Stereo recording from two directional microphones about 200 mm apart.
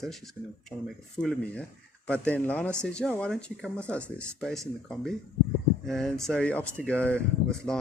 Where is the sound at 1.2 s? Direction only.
5° left (ahead or behind).